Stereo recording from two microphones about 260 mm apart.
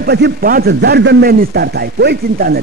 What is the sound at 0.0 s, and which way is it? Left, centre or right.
A man's voice, right.